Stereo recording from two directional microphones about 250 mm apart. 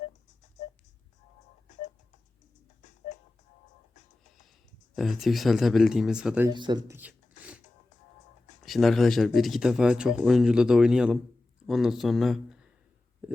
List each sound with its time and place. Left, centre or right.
1.6 s music: left
4.9 s speech: centre
6.5 s speech: centre
8.6 s speech: centre
13.2 s a sound: centre